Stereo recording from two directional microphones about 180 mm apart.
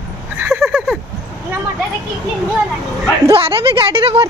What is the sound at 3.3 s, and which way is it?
Speech, 30° right (ahead or behind).